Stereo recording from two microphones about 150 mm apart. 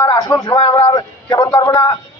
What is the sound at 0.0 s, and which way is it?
A man's voice, 20° left (ahead or behind).